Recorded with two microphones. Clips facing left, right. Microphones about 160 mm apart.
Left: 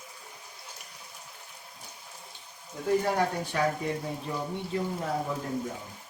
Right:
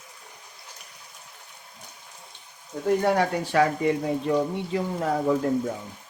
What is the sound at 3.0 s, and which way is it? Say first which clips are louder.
Speech: right 5 dB; 90° right.